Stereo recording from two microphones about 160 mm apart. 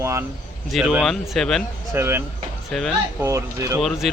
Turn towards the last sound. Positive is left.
turn(degrees=0)  # may be behind; listen again after turning